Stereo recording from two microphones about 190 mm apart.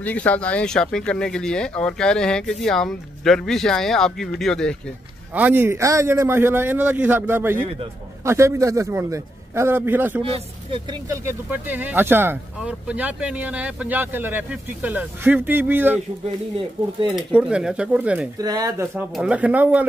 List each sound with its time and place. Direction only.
0.0 s speech: 10° left (ahead or behind)
5.3 s speech: 10° right (ahead or behind)
10.3 s speech: 25° right (ahead or behind)
17.1 s speech: 5° right (ahead or behind)
18.4 s speech: 20° right (ahead or behind)
19.1 s speech: 5° right (ahead or behind)